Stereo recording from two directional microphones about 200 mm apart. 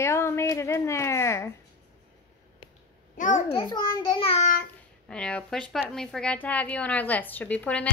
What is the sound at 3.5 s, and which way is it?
Speech, 20° left (ahead or behind).